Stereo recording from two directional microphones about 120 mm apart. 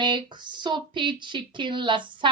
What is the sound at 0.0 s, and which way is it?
A woman's voice, 40° right (ahead or behind).